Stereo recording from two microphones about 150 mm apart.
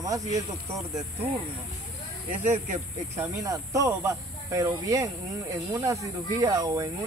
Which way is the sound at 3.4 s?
25° right (ahead or behind).